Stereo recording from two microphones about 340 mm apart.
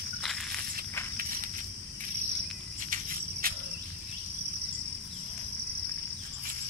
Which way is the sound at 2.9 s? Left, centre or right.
Right.